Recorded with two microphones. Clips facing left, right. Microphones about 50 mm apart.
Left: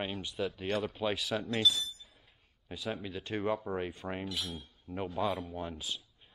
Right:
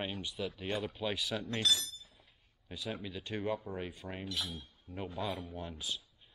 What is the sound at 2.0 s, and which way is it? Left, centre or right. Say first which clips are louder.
Chink: left 2 dB; centre.